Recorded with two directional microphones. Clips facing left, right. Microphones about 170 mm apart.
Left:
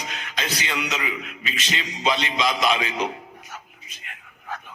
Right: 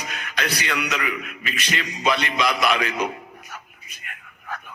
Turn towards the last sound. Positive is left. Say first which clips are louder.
# right 1 dB
turn(degrees=25)  # may be behind; listen again after turning